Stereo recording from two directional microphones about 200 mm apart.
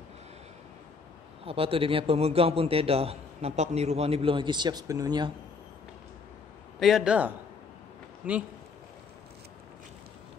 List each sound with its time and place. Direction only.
1.4 s a man's voice: 30° right (ahead or behind)
6.8 s a man's voice: centre (ahead or behind)